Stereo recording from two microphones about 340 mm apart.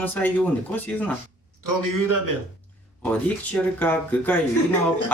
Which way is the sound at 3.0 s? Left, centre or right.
Centre.